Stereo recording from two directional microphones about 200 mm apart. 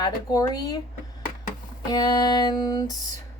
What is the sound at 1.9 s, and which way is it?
Speech, 20° left (ahead or behind).